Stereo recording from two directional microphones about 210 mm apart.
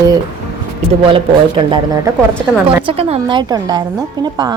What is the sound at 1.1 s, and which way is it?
A woman's voice, 25° right (ahead or behind).